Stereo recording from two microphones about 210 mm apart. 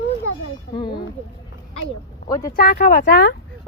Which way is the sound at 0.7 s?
20° left (ahead or behind).